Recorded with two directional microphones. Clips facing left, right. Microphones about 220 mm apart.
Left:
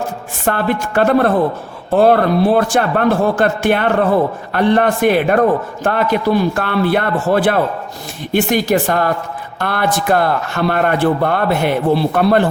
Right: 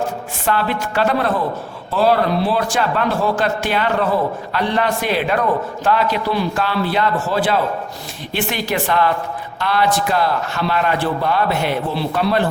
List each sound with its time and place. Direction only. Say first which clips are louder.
0.4 s a man's voice: left 3 dB; 50° left (ahead or behind)
8.3 s a man's voice: left 8 dB; 45° left (ahead or behind)